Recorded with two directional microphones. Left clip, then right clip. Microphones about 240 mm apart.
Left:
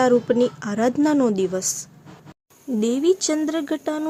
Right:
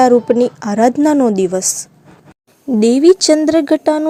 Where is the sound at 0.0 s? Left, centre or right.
Centre.